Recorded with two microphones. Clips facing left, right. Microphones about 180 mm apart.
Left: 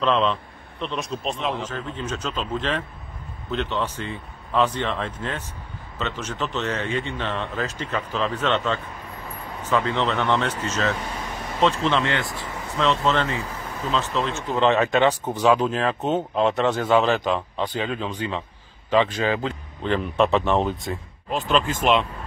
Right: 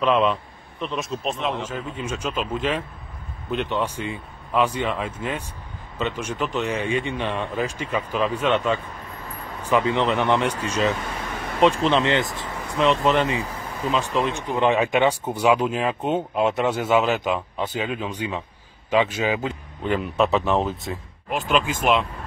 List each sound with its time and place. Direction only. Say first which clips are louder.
0.0 s speech: right 2 dB; 10° right (ahead or behind)